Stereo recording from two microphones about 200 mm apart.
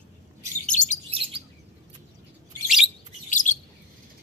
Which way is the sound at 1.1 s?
25° right (ahead or behind).